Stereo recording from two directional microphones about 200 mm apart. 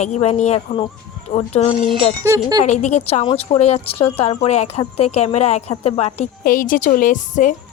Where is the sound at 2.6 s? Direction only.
35° left (ahead or behind).